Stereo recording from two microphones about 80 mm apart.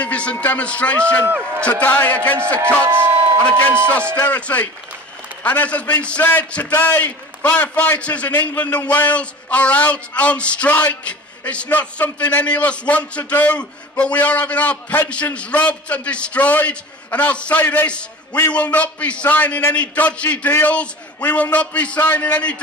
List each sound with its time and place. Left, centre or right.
0.0 s a man's voice: centre
2.8 s speech: right
3.9 s a man's voice: centre